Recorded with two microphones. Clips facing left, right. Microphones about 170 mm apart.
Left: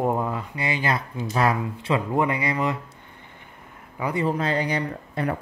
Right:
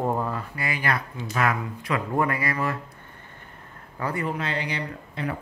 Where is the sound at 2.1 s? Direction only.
20° left (ahead or behind).